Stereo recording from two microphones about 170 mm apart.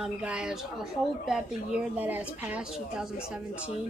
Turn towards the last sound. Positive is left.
turn(degrees=-10)  # may be behind; listen again after turning